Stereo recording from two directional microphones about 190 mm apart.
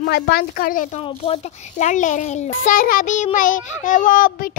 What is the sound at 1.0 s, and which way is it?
A child's voice, 30° left (ahead or behind).